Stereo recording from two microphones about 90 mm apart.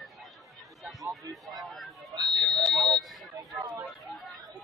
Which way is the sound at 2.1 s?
50° right (ahead or behind).